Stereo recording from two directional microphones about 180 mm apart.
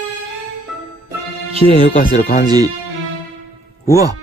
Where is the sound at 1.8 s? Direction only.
25° right (ahead or behind).